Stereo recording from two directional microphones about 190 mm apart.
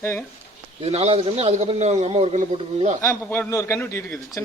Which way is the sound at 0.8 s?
30° right (ahead or behind).